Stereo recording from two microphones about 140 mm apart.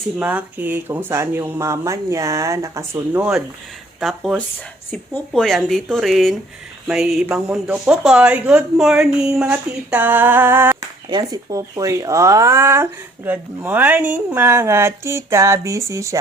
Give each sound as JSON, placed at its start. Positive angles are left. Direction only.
{"t": 0.2, "sound": "speech", "side_deg": -10}
{"t": 4.0, "sound": "speech", "side_deg": 0}
{"t": 11.1, "sound": "speech", "side_deg": -30}